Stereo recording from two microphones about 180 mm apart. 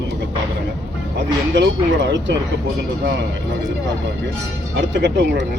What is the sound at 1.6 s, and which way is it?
Speech, 85° right.